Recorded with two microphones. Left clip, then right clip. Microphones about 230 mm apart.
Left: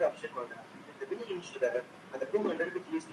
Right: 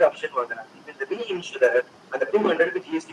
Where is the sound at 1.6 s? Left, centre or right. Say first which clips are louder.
Right 13 dB; right.